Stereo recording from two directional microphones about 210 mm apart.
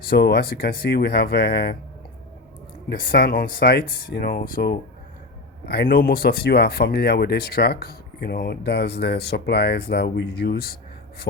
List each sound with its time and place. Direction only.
0.1 s speech: 50° left (ahead or behind)
2.9 s speech: 45° left (ahead or behind)